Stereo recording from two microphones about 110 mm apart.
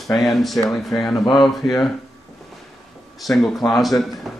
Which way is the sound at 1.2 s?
40° left (ahead or behind).